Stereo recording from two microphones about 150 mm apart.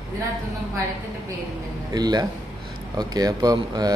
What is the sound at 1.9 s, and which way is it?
Speech, 25° right (ahead or behind).